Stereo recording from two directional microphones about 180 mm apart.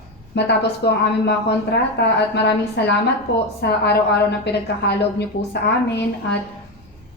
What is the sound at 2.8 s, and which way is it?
A woman's voice, 70° left (ahead or behind).